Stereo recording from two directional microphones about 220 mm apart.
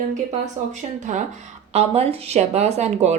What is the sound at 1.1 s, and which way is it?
Speech, 35° right (ahead or behind).